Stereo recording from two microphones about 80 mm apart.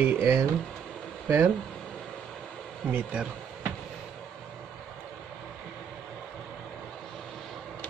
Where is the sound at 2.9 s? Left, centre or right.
Centre.